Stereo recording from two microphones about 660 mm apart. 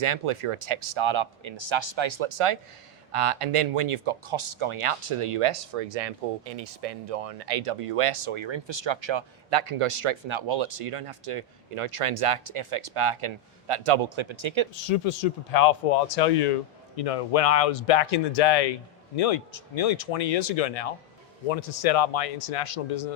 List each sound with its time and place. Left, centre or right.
0.0 s speech: right
14.8 s speech: left
17.0 s speech: left